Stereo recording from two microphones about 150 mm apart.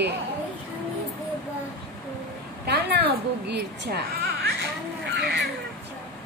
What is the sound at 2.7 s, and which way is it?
A woman's voice, 90° right.